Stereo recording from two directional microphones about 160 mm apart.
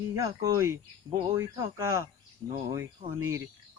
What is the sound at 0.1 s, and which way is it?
Cricket, 20° right (ahead or behind).